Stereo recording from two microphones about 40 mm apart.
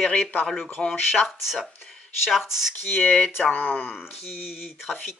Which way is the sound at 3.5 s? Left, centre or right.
Left.